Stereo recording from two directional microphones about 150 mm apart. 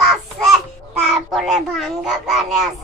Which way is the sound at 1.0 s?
Centre (ahead or behind).